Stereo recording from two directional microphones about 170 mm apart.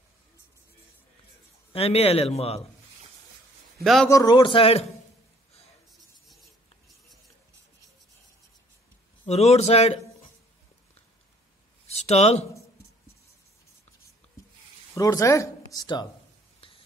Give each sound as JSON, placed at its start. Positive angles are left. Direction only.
{"t": 1.7, "sound": "speech", "side_deg": 35}
{"t": 3.8, "sound": "a man's voice", "side_deg": 0}
{"t": 4.1, "sound": "a man's voice", "side_deg": 20}
{"t": 5.9, "sound": "a sound", "side_deg": 0}
{"t": 9.3, "sound": "speech", "side_deg": 40}
{"t": 11.9, "sound": "speech", "side_deg": 40}
{"t": 15.0, "sound": "a man's voice", "side_deg": 20}
{"t": 16.6, "sound": "whispering", "side_deg": 30}